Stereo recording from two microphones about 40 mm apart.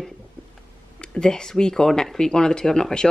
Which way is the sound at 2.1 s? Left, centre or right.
Centre.